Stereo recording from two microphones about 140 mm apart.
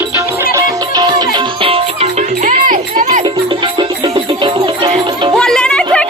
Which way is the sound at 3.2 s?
35° right (ahead or behind).